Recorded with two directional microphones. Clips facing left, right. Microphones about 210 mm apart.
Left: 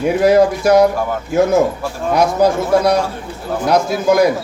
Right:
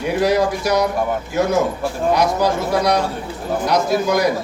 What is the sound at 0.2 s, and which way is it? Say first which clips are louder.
Speech: left 5 dB; 55° left (ahead or behind).